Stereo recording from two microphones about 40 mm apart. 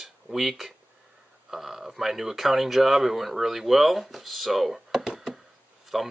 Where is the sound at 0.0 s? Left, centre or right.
Centre.